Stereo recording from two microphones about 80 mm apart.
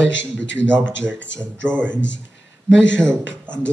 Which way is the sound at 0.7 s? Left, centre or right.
Right.